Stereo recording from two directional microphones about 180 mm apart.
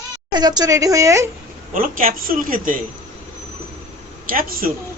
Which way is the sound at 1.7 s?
50° right (ahead or behind).